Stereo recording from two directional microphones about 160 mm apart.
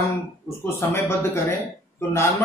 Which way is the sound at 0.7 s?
15° left (ahead or behind).